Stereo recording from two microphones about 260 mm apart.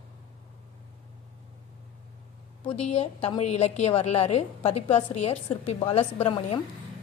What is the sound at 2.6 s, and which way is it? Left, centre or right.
A woman's voice, left.